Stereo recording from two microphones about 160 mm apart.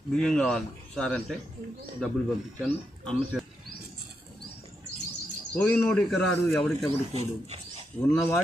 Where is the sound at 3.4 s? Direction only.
5° left (ahead or behind).